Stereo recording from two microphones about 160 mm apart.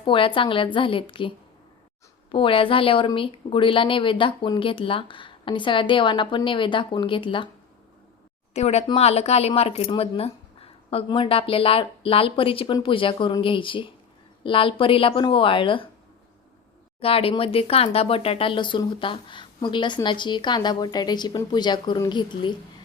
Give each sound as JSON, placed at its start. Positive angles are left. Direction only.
{"t": 0.0, "sound": "a woman's voice", "side_deg": 30}
{"t": 2.3, "sound": "a woman's voice", "side_deg": 35}
{"t": 8.5, "sound": "a woman's voice", "side_deg": 40}
{"t": 17.0, "sound": "speech", "side_deg": 35}